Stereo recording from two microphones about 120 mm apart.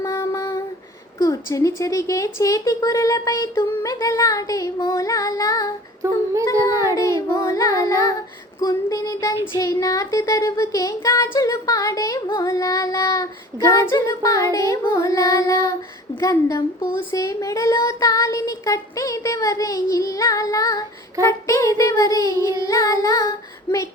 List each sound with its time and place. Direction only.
0.0 s a sound: 25° left (ahead or behind)
1.2 s speech: 25° left (ahead or behind)
6.0 s child singing: 25° right (ahead or behind)
6.9 s speech: 25° left (ahead or behind)